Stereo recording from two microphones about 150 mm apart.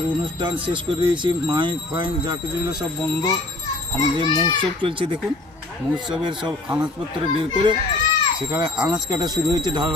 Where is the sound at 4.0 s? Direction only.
30° right (ahead or behind).